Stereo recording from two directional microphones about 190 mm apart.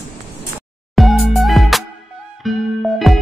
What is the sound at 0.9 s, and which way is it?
Music, centre (ahead or behind).